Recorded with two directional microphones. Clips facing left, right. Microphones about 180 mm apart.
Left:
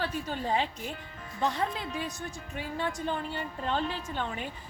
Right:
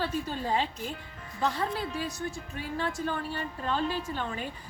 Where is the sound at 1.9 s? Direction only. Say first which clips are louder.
Right 2 dB; 20° left (ahead or behind).